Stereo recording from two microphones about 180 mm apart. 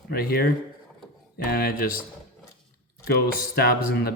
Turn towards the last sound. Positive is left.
turn(degrees=60)  # may be behind; listen again after turning